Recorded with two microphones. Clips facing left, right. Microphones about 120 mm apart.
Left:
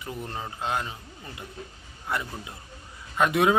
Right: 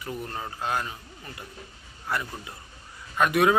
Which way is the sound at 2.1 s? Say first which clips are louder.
Even; 20° left (ahead or behind).